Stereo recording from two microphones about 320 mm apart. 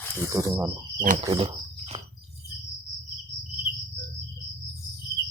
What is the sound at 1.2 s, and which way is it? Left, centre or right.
Cricket, centre.